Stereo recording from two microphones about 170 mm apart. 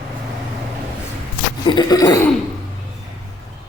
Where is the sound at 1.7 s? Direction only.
25° left (ahead or behind).